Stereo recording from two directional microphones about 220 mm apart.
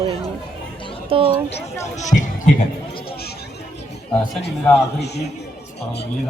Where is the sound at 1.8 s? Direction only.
30° left (ahead or behind).